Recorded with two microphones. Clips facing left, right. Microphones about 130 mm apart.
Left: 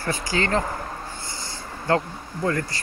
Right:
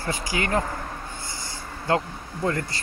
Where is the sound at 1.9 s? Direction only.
20° right (ahead or behind).